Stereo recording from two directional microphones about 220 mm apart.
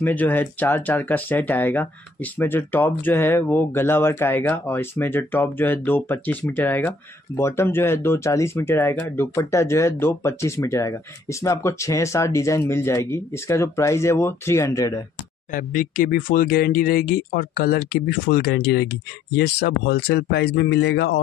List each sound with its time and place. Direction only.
0.0 s speech: 10° left (ahead or behind)
15.5 s speech: 40° left (ahead or behind)